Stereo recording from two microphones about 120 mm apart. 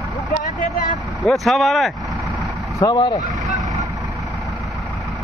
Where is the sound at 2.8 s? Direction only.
40° left (ahead or behind).